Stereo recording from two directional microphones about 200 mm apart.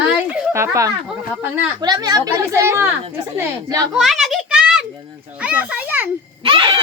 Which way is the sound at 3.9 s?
Centre (ahead or behind).